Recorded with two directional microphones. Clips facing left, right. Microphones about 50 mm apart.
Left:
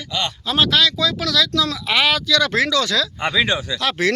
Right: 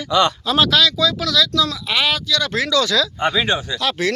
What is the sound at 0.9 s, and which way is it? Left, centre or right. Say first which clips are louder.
Speech: right 1 dB; left.